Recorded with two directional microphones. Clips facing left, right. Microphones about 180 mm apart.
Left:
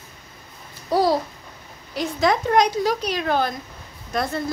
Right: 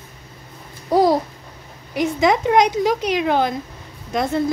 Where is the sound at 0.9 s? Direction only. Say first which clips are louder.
Right 4 dB; 20° right (ahead or behind).